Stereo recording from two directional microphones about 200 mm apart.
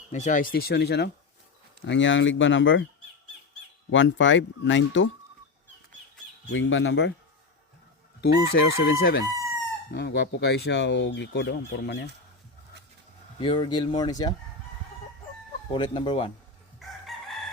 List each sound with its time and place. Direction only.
0.1 s speech: 35° left (ahead or behind); by 1.1 s 55° left (ahead or behind)
1.8 s speech: 65° left (ahead or behind)
3.9 s speech: 70° left (ahead or behind)
6.5 s speech: 70° left (ahead or behind)
8.2 s speech: 50° left (ahead or behind)
13.4 s speech: 25° left (ahead or behind)
15.7 s speech: 25° left (ahead or behind)
17.1 s chicken: centre (ahead or behind)